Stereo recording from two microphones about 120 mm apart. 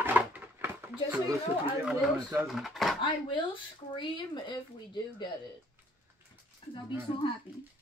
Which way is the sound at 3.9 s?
40° left (ahead or behind).